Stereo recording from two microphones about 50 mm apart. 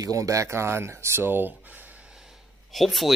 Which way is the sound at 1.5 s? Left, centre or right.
Right.